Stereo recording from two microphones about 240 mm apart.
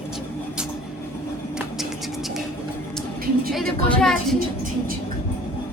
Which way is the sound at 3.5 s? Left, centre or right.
Centre.